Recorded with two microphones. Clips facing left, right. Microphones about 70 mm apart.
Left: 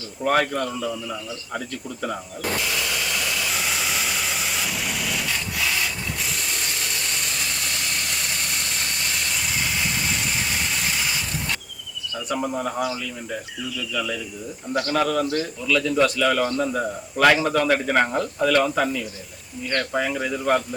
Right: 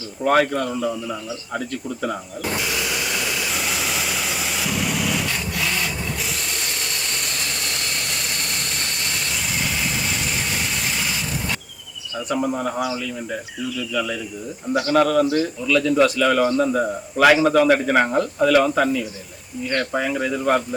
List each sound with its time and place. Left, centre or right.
0.2 s a man's voice: centre
0.7 s speech: centre
1.5 s a man's voice: centre
3.5 s vehicle: centre
12.3 s a man's voice: centre